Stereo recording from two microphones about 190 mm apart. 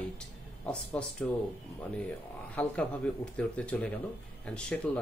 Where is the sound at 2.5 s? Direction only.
5° left (ahead or behind).